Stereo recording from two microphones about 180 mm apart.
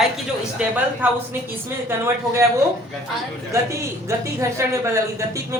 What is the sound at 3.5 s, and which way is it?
A man's voice, 15° right (ahead or behind).